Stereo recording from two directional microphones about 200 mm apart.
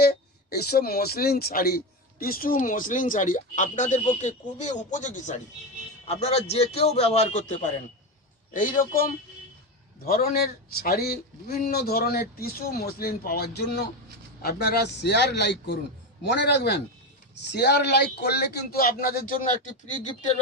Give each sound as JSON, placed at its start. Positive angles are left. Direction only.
{"t": 0.0, "sound": "a man's voice", "side_deg": 50}